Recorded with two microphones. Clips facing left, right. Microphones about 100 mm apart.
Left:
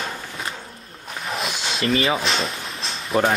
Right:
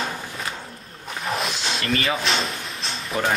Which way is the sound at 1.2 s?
Centre (ahead or behind).